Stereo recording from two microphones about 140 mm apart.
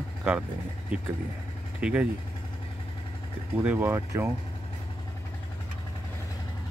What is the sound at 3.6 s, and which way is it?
Speech, 10° right (ahead or behind).